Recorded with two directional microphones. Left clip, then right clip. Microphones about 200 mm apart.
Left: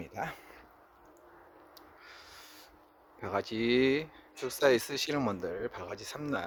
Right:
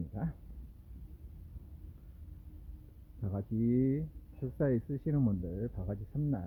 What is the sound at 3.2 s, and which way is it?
Speech, 35° left (ahead or behind).